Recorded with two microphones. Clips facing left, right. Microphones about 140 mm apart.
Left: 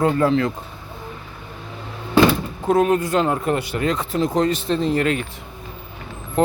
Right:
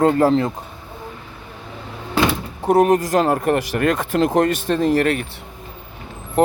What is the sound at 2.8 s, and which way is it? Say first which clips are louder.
Speech: right 3 dB; 40° right (ahead or behind).